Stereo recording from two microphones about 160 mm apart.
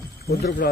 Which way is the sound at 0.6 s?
75° left (ahead or behind).